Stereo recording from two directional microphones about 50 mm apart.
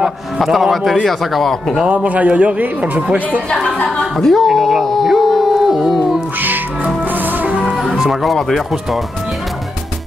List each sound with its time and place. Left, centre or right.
0.4 s a man's voice: centre
1.9 s a man's voice: right
4.0 s speech: centre
7.9 s speech: centre